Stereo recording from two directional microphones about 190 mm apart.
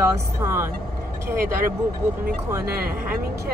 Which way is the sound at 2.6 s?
55° right (ahead or behind).